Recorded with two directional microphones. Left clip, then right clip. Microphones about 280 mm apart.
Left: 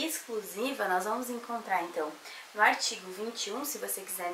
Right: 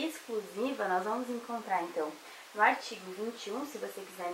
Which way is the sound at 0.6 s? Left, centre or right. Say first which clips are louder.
Left 2 dB; centre.